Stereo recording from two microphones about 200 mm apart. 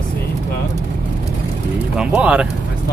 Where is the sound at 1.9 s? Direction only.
5° right (ahead or behind).